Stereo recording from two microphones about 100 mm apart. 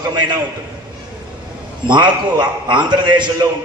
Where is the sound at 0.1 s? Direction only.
45° right (ahead or behind).